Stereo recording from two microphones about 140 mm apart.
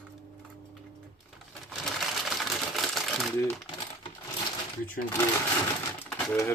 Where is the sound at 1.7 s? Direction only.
Centre (ahead or behind).